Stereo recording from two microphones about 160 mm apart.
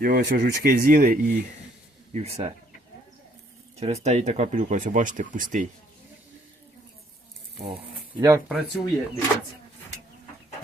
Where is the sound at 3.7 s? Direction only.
40° right (ahead or behind).